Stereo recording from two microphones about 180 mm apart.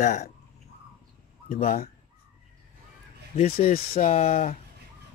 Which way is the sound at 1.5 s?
50° left (ahead or behind).